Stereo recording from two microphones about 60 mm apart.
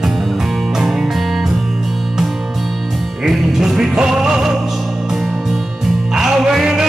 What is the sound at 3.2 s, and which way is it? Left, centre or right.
Music, centre.